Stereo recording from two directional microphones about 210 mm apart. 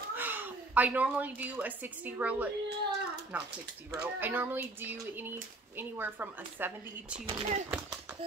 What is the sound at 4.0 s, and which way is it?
A woman's voice, 10° right (ahead or behind).